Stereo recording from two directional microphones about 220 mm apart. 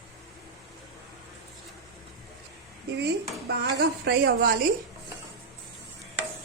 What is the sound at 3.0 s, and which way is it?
Speech, 45° right (ahead or behind).